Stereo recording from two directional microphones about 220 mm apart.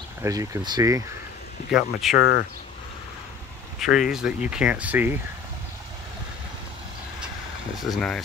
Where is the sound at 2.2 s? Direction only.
45° left (ahead or behind).